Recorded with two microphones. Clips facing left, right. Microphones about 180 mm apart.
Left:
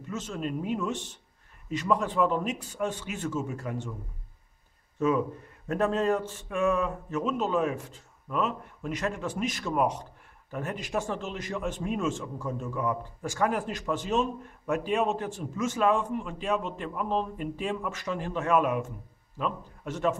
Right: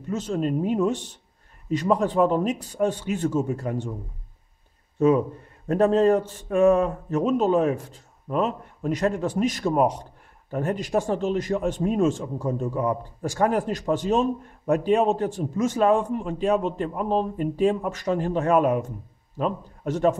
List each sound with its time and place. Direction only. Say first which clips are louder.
0.1 s a man's voice: right 8 dB; 35° right (ahead or behind)
4.9 s a man's voice: right 6 dB; 35° right (ahead or behind)